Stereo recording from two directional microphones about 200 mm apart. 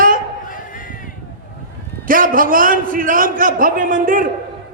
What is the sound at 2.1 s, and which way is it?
A man's voice, 45° right (ahead or behind).